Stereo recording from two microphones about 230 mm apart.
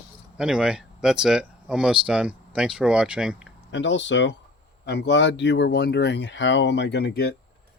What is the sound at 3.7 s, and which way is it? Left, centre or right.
Speech, left.